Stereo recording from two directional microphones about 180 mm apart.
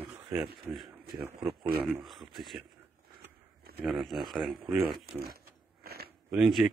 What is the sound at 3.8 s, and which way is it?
Speech, centre (ahead or behind).